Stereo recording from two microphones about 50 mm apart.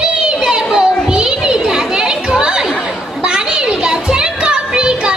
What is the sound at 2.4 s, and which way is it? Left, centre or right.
Chatter, centre.